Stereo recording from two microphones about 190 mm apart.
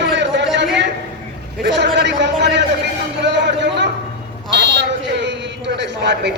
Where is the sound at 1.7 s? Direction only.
65° right (ahead or behind).